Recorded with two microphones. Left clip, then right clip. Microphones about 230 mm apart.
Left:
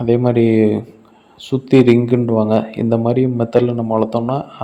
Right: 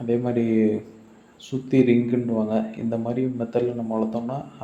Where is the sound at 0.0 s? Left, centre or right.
Left.